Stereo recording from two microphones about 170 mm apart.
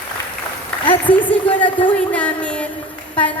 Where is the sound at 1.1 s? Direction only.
10° left (ahead or behind).